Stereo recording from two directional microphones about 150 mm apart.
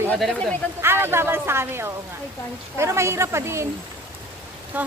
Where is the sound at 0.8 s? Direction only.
15° right (ahead or behind).